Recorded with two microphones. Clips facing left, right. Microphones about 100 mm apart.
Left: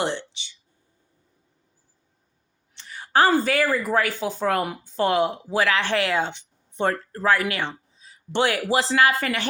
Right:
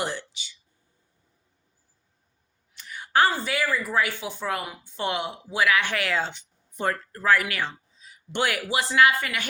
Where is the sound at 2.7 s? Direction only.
30° left (ahead or behind).